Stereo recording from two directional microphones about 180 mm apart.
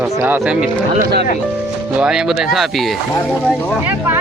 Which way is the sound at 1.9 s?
5° right (ahead or behind).